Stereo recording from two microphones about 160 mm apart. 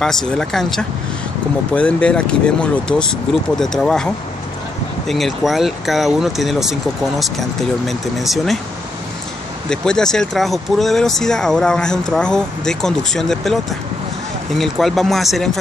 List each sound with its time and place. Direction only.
0.0 s speech: 5° left (ahead or behind)
9.7 s speech: 5° left (ahead or behind)